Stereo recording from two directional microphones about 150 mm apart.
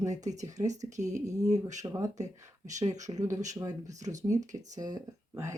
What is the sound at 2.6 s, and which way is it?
Speech, 55° right (ahead or behind).